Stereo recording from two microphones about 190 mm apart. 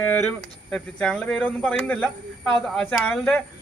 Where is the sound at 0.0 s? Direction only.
5° left (ahead or behind).